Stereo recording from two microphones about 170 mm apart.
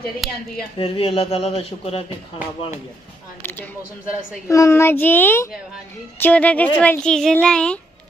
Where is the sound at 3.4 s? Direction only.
10° left (ahead or behind).